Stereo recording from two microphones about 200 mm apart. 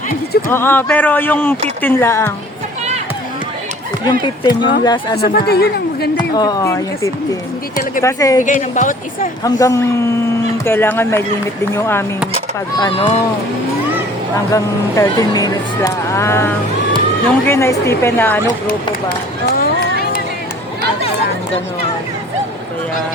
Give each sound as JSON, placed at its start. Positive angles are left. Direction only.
{"t": 0.5, "sound": "speech", "side_deg": 10}
{"t": 4.2, "sound": "speech", "side_deg": 25}
{"t": 5.1, "sound": "speech", "side_deg": 50}
{"t": 6.3, "sound": "speech", "side_deg": 20}
{"t": 8.7, "sound": "speech", "side_deg": 40}
{"t": 9.4, "sound": "speech", "side_deg": 15}
{"t": 12.7, "sound": "speech", "side_deg": 25}
{"t": 14.5, "sound": "speech", "side_deg": 15}
{"t": 19.5, "sound": "run", "side_deg": 50}